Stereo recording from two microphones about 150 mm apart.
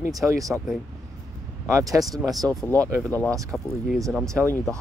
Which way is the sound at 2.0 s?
Centre (ahead or behind).